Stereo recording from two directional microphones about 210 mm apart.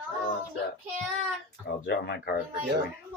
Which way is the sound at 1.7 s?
50° left (ahead or behind).